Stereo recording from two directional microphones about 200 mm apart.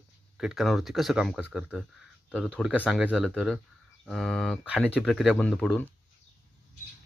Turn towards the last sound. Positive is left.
turn(degrees=0)  # may be behind; listen again after turning